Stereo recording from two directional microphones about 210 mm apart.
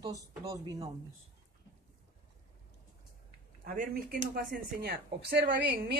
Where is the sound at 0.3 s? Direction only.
15° right (ahead or behind).